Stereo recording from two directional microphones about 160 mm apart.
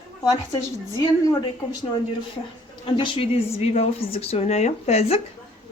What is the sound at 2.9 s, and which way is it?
Speech, 30° left (ahead or behind).